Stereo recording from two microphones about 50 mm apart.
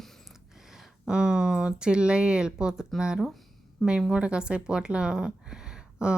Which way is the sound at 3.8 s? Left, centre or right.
Centre.